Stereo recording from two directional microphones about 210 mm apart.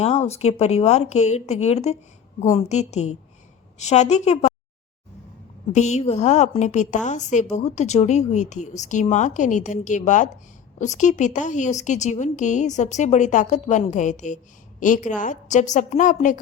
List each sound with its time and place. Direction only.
0.0 s a woman's voice: 30° left (ahead or behind)
5.7 s a woman's voice: 30° left (ahead or behind)